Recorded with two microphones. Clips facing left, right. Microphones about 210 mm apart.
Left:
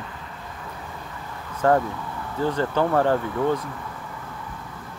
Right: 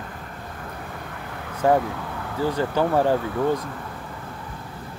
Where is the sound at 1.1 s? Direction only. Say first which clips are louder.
Right 2 dB; 65° right (ahead or behind).